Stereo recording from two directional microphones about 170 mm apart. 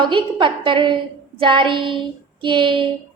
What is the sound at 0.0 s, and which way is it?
A woman's voice, 30° right (ahead or behind).